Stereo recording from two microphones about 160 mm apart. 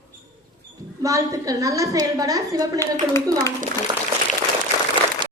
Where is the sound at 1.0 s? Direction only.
20° right (ahead or behind).